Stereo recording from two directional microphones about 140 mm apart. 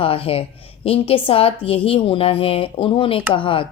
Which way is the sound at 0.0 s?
40° left (ahead or behind).